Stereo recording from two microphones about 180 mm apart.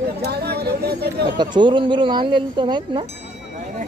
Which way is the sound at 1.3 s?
25° right (ahead or behind).